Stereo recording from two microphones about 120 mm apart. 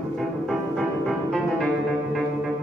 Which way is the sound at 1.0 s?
5° left (ahead or behind).